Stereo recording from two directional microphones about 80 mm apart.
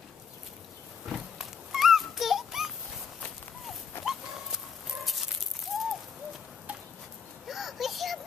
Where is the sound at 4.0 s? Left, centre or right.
Left.